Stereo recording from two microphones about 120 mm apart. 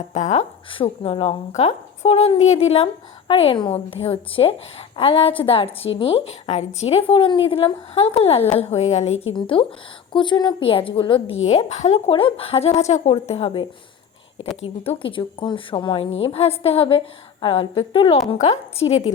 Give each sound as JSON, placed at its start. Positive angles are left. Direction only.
{"t": 0.1, "sound": "a woman's voice", "side_deg": 75}
{"t": 0.7, "sound": "a woman's voice", "side_deg": 50}
{"t": 1.5, "sound": "a woman's voice", "side_deg": 65}
{"t": 9.3, "sound": "a woman's voice", "side_deg": 45}
{"t": 11.4, "sound": "a woman's voice", "side_deg": 65}
{"t": 14.8, "sound": "a woman's voice", "side_deg": 45}
{"t": 18.3, "sound": "a woman's voice", "side_deg": 65}